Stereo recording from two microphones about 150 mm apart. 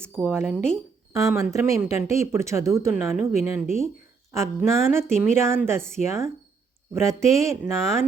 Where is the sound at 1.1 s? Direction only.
20° right (ahead or behind).